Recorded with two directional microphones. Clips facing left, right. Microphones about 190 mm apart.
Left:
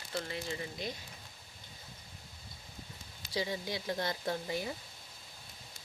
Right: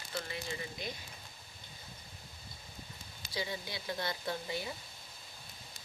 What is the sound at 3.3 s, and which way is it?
Speech, 35° left (ahead or behind).